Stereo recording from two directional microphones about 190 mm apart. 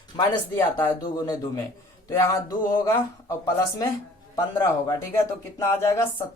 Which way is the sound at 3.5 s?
15° left (ahead or behind).